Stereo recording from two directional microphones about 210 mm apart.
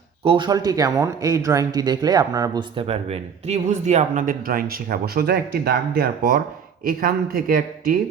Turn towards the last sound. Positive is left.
turn(degrees=-45)  # may be behind; listen again after turning